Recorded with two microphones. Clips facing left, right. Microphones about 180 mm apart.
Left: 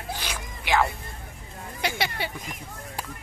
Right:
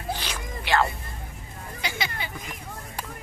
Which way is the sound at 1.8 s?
65° left (ahead or behind).